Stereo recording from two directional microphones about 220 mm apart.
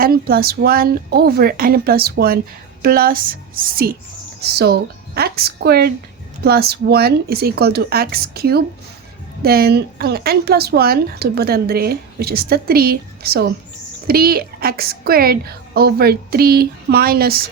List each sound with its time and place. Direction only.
0.0 s a woman's voice: 45° right (ahead or behind)